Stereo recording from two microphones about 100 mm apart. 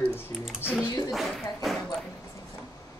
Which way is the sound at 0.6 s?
20° left (ahead or behind).